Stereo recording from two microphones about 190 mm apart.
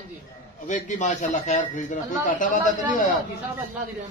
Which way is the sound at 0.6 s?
40° left (ahead or behind).